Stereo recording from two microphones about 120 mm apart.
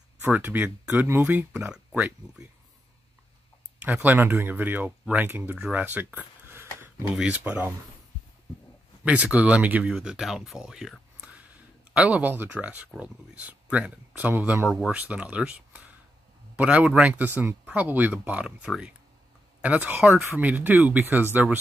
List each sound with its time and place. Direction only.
0.2 s speech: 15° right (ahead or behind)
3.8 s speech: 15° right (ahead or behind)
6.5 s a sound: 20° right (ahead or behind)
7.2 s speech: 10° right (ahead or behind)
9.0 s speech: 10° right (ahead or behind)
14.7 s speech: 5° right (ahead or behind)